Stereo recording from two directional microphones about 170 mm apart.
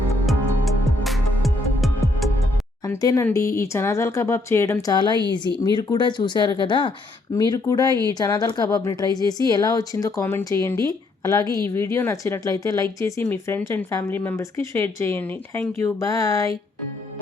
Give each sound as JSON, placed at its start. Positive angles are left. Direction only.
{"t": 0.3, "sound": "music", "side_deg": 0}
{"t": 2.8, "sound": "speech", "side_deg": 20}